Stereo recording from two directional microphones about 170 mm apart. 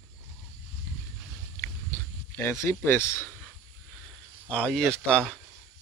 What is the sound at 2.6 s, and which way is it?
Speech, 10° left (ahead or behind).